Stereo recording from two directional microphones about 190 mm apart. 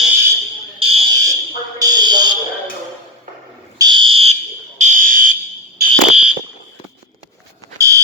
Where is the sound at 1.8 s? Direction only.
20° right (ahead or behind).